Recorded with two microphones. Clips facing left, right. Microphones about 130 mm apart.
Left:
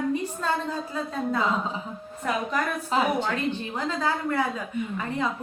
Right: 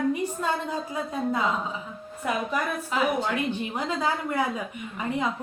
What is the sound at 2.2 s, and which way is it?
Speech, 10° right (ahead or behind).